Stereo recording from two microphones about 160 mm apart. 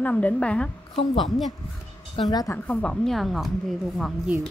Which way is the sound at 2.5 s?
10° left (ahead or behind).